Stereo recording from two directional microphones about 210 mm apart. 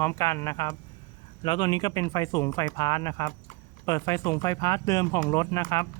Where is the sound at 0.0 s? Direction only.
15° left (ahead or behind).